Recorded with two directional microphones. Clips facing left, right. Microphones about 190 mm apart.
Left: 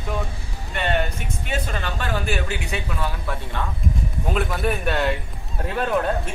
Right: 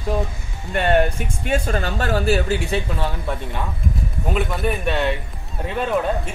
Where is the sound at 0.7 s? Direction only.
45° right (ahead or behind); by 3.4 s 30° right (ahead or behind).